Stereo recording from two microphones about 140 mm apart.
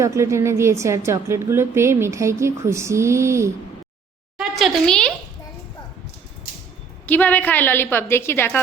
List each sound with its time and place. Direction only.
0.0 s a woman's voice: 20° right (ahead or behind)
4.4 s a child's voice: centre (ahead or behind)
7.1 s a woman's voice: 10° left (ahead or behind)